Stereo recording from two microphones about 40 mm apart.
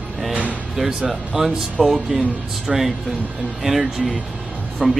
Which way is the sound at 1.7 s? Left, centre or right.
Centre.